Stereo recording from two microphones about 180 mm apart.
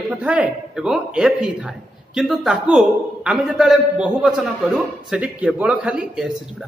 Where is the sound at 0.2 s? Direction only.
5° right (ahead or behind).